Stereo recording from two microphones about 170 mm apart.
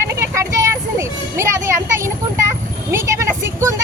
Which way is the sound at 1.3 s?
15° right (ahead or behind).